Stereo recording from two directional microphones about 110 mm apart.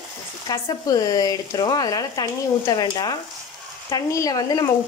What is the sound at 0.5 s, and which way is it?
Speech, 35° left (ahead or behind).